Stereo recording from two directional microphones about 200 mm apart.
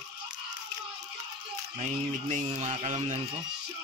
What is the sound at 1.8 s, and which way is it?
Speech, 35° right (ahead or behind).